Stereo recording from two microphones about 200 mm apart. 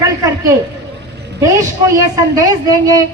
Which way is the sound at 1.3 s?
15° right (ahead or behind).